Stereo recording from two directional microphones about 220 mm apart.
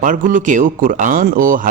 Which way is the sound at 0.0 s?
35° right (ahead or behind).